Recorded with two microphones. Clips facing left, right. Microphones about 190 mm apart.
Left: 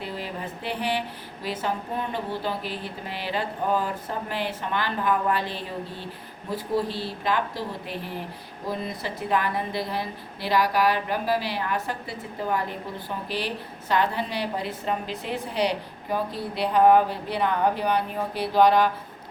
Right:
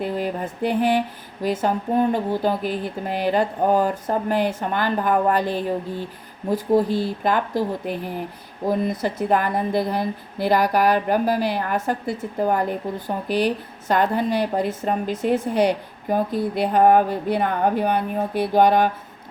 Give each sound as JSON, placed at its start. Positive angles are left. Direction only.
{"t": 0.0, "sound": "speech", "side_deg": -50}